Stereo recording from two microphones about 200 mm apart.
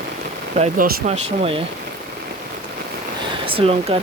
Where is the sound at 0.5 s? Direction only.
40° right (ahead or behind).